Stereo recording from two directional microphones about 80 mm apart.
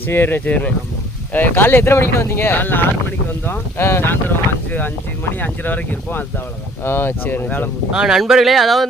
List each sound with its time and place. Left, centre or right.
0.1 s speech: left
5.4 s speech: left
7.9 s speech: centre